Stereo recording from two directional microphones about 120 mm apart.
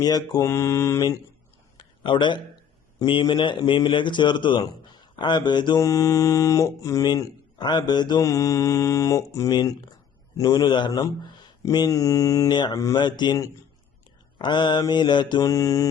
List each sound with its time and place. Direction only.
0.0 s mantra: 35° left (ahead or behind)
1.8 s a sound: 40° left (ahead or behind)
3.1 s a man's voice: 40° left (ahead or behind)